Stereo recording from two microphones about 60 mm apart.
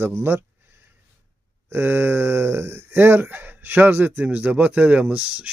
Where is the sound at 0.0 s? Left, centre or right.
Right.